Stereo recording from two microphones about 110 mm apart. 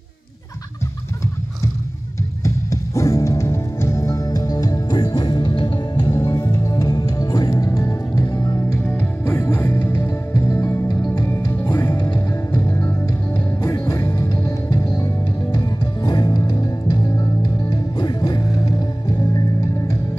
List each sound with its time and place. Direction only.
2.4 s music: 30° left (ahead or behind); by 6.0 s 50° left (ahead or behind)
6.0 s music: 25° left (ahead or behind)
11.9 s music: 35° left (ahead or behind)
12.4 s music: 20° left (ahead or behind)
13.0 s music: 30° left (ahead or behind)